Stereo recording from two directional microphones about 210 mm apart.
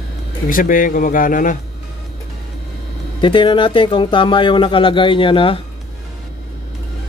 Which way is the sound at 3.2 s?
25° left (ahead or behind).